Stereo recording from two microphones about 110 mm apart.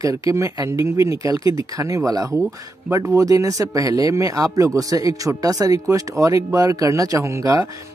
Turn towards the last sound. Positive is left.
turn(degrees=-30)  # may be behind; listen again after turning